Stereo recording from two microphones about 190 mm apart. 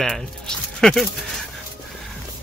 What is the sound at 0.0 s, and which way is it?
Speech, 5° left (ahead or behind).